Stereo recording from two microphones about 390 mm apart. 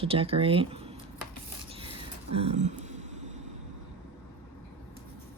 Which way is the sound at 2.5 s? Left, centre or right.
Centre.